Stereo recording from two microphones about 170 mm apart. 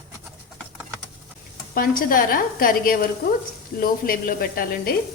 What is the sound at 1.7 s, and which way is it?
A woman's voice, 60° left (ahead or behind).